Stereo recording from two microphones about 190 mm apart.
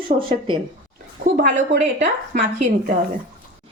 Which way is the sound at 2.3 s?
40° right (ahead or behind).